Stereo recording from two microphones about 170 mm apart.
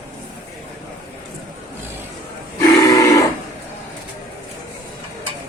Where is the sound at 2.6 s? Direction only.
20° left (ahead or behind).